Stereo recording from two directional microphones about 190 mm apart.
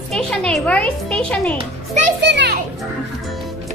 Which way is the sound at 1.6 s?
40° right (ahead or behind).